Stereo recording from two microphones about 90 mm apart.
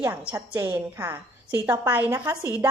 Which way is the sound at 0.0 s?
20° right (ahead or behind).